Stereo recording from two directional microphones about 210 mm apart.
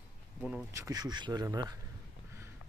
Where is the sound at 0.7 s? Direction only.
15° right (ahead or behind).